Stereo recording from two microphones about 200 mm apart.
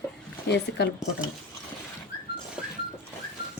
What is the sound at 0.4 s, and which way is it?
Speech, 60° left (ahead or behind).